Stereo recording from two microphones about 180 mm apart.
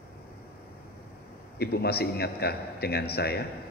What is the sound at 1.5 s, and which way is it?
A man's voice, 60° left (ahead or behind).